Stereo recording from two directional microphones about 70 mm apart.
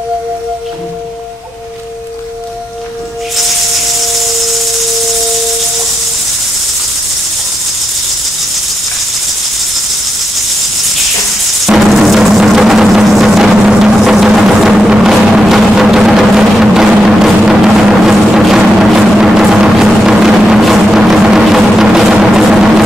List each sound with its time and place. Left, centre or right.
11.6 s music: centre